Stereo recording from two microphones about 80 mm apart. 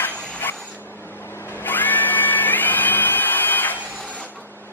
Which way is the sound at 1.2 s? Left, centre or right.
Left.